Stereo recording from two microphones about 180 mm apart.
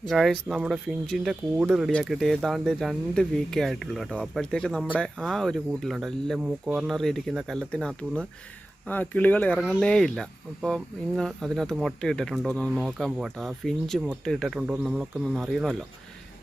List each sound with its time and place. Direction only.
0.1 s speech: centre (ahead or behind)